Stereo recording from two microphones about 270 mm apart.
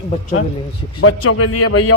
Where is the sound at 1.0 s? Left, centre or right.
Left.